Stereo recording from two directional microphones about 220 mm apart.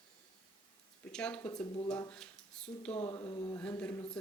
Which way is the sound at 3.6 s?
5° left (ahead or behind).